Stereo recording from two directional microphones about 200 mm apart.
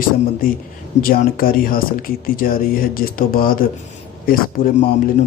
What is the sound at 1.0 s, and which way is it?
Speech, 45° left (ahead or behind).